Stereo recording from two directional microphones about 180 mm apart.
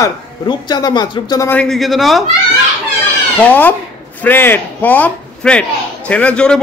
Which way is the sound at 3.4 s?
10° left (ahead or behind).